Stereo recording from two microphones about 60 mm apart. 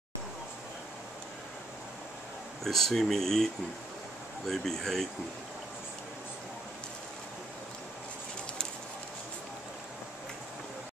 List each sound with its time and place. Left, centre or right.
2.6 s speech: centre
4.5 s speech: centre